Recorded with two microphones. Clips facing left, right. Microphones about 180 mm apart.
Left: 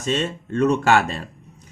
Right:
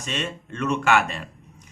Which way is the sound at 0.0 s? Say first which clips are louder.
Left 7 dB; 35° left (ahead or behind).